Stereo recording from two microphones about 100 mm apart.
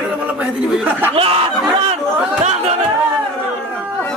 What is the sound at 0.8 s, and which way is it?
Speech, 20° right (ahead or behind).